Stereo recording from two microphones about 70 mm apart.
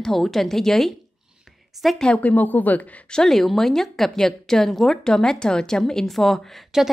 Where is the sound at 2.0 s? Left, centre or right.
Left.